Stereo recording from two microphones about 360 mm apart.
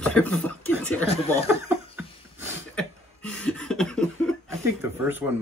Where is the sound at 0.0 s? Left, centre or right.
Centre.